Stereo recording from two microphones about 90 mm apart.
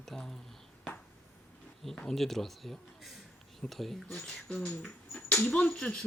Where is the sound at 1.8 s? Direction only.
5° left (ahead or behind).